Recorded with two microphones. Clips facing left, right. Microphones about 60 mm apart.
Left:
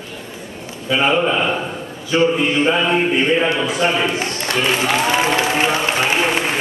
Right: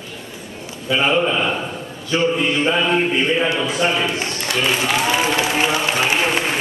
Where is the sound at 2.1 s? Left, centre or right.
Centre.